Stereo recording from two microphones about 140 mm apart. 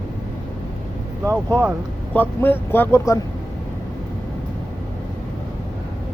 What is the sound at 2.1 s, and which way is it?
Speech, 15° left (ahead or behind).